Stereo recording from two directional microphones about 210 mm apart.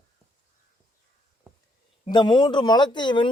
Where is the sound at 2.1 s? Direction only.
20° left (ahead or behind).